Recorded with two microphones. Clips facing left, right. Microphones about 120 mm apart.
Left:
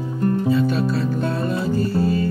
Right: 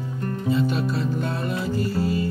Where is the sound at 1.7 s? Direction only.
25° left (ahead or behind).